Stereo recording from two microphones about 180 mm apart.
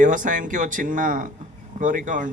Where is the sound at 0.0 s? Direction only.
45° right (ahead or behind).